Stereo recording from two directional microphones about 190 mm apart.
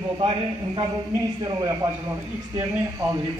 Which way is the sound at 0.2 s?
25° right (ahead or behind).